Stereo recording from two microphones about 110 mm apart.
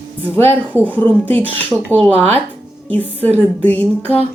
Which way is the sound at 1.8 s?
15° left (ahead or behind).